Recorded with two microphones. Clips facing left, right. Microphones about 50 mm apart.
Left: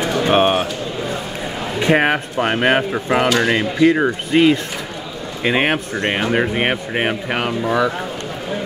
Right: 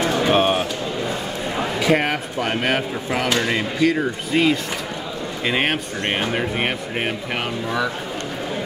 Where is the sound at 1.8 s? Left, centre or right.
Left.